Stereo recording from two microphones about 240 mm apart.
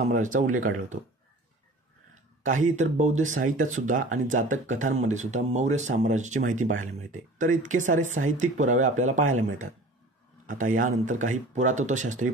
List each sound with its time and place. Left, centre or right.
0.0 s speech: right
2.4 s speech: right
10.4 s speech: right